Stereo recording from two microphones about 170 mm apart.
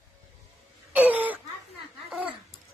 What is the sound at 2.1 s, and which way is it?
Babbling, 5° right (ahead or behind).